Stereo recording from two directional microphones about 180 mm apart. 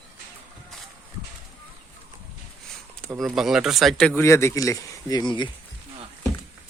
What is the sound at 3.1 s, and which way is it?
Speech, centre (ahead or behind).